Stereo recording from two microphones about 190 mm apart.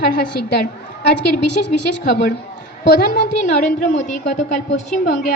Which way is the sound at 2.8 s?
60° left (ahead or behind).